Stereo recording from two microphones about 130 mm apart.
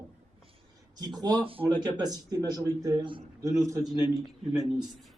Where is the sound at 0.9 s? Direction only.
30° right (ahead or behind).